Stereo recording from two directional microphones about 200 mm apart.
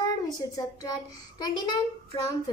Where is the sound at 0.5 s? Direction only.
20° left (ahead or behind).